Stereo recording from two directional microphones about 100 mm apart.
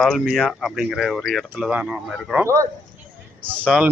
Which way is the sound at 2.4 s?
30° right (ahead or behind).